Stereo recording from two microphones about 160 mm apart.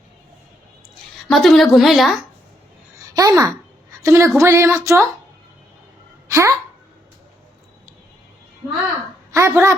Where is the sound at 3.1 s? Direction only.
20° right (ahead or behind).